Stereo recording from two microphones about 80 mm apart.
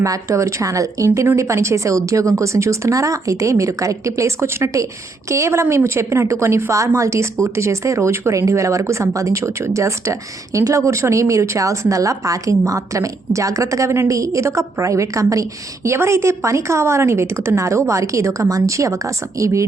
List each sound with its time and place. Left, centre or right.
0.0 s a woman's voice: right